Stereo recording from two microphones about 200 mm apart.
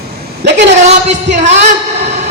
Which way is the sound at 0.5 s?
35° right (ahead or behind).